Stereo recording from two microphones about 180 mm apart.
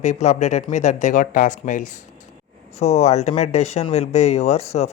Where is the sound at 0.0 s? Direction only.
40° left (ahead or behind).